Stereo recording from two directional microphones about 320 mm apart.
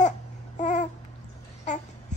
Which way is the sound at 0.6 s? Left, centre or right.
Left.